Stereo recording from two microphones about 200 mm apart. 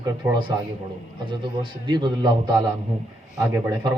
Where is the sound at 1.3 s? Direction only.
25° right (ahead or behind).